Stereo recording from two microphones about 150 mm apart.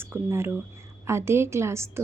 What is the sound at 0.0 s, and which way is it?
Speech, 15° right (ahead or behind).